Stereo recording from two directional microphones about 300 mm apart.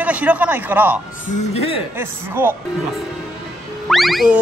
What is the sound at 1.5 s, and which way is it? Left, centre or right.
Speech, centre.